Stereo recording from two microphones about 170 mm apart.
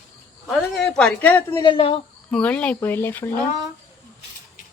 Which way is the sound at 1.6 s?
30° left (ahead or behind).